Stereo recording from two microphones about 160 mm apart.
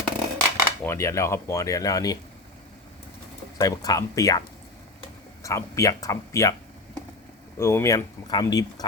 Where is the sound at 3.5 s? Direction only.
20° left (ahead or behind).